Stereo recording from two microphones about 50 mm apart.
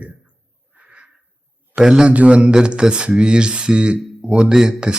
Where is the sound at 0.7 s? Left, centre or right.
Right.